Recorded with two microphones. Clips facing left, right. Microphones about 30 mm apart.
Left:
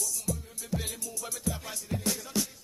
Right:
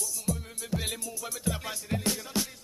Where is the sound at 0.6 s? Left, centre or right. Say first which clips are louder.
Right 1 dB; right.